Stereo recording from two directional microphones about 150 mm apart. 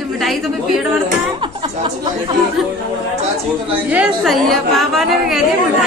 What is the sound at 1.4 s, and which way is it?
Music, 35° right (ahead or behind).